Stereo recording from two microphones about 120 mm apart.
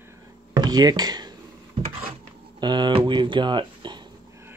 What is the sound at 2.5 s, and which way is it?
Speech, 40° right (ahead or behind).